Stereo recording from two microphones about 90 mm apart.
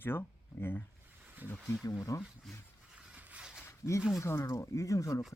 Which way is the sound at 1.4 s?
20° right (ahead or behind).